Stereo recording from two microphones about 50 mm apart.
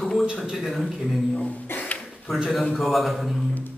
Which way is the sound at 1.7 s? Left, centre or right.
Left.